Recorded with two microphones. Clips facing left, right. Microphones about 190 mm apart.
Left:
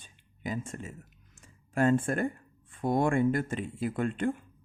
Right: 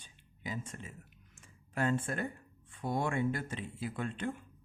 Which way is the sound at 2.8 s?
50° left (ahead or behind).